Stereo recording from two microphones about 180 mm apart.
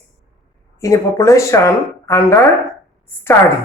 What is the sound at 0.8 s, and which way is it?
A woman's voice, 15° left (ahead or behind).